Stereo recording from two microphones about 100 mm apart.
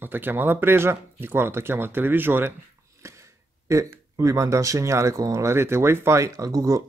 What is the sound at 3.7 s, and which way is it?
Speech, 30° right (ahead or behind).